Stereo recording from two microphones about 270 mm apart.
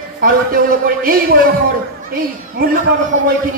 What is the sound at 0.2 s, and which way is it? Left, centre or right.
A man's voice, right.